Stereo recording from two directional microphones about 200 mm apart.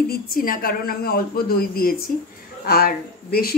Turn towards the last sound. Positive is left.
turn(degrees=50)  # may be behind; listen again after turning